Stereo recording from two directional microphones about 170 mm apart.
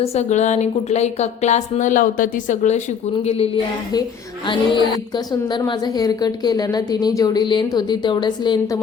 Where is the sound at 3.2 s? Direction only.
35° left (ahead or behind).